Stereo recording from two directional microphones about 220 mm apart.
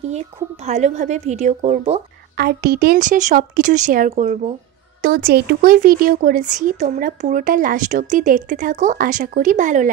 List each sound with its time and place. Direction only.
0.7 s speech: 30° right (ahead or behind)
2.3 s speech: 45° right (ahead or behind)